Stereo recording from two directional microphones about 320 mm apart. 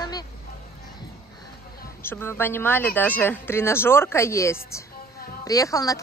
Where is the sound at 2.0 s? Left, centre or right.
Centre.